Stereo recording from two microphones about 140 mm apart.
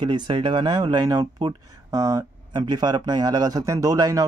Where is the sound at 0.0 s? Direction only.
35° right (ahead or behind).